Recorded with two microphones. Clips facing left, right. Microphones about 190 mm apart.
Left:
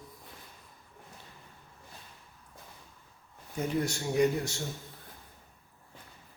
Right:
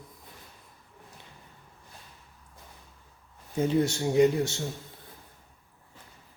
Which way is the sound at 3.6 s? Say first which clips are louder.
Right 6 dB; 25° right (ahead or behind).